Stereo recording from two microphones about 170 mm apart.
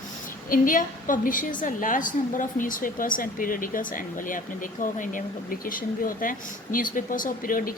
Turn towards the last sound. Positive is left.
turn(degrees=55)  # may be behind; listen again after turning